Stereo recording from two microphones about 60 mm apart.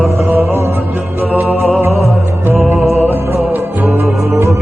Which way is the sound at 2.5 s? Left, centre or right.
Right.